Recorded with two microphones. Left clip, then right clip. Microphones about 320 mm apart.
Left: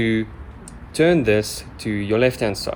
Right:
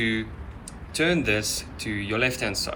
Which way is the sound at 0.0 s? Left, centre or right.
Left.